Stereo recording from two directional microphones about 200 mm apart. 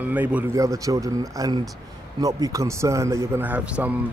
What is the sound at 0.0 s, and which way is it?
Speech, 10° right (ahead or behind).